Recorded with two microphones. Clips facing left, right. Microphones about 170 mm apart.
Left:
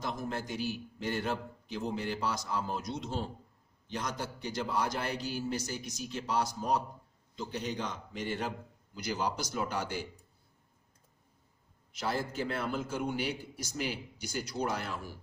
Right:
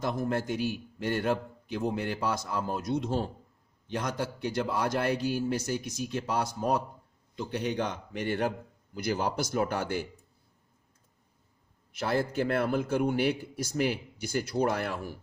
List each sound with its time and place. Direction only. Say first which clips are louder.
0.0 s a man's voice: right 7 dB; 55° right (ahead or behind)
11.9 s a man's voice: right 5 dB; 60° right (ahead or behind)